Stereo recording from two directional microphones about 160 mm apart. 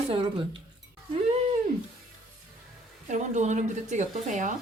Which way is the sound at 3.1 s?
45° right (ahead or behind).